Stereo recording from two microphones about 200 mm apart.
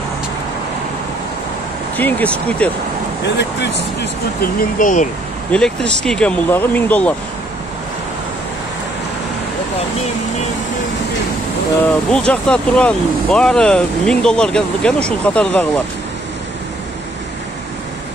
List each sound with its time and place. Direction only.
2.0 s speech: 10° left (ahead or behind)
3.3 s speech: 60° left (ahead or behind); by 5.0 s 40° left (ahead or behind)
5.5 s speech: 5° left (ahead or behind)
11.8 s speech: 5° left (ahead or behind)